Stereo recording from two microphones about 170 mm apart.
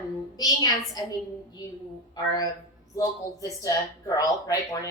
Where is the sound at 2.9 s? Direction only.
20° left (ahead or behind).